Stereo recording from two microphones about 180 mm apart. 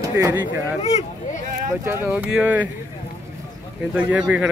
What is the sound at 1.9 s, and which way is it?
Speech, 10° right (ahead or behind).